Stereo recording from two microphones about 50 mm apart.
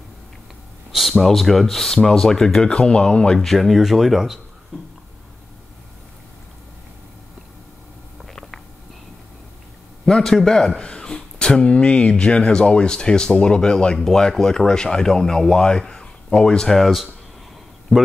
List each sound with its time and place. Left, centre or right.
0.9 s speech: centre
3.3 s speech: centre
8.3 s a sound: centre
10.0 s speech: centre
16.8 s speech: centre